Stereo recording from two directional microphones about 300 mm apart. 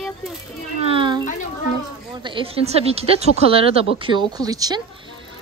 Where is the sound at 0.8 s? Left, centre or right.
Centre.